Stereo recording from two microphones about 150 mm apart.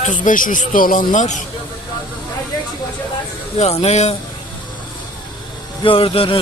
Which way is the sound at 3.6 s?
45° left (ahead or behind).